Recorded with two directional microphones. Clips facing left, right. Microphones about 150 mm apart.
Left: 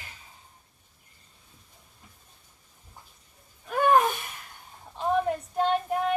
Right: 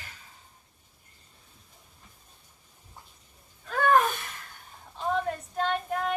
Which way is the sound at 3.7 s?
15° left (ahead or behind).